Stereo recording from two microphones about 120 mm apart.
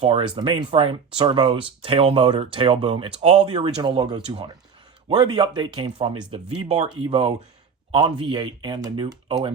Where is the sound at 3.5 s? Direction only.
40° right (ahead or behind).